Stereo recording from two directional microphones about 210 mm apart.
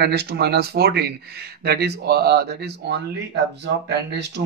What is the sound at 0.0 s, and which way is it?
Speech, 50° right (ahead or behind).